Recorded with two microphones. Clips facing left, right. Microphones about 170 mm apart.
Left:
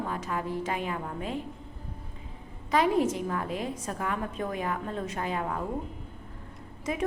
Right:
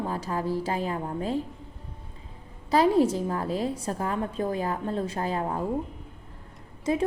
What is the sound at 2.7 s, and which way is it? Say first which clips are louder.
A woman's voice: right 4 dB; 35° right (ahead or behind).